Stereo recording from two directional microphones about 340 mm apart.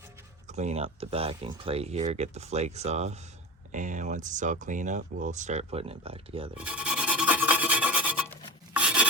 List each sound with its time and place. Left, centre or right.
0.5 s speech: centre
6.6 s rub: centre